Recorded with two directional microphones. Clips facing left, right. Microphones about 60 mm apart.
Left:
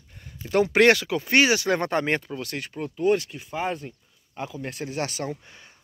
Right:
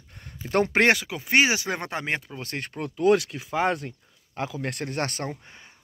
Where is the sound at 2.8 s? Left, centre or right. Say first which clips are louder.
Right 2 dB; right.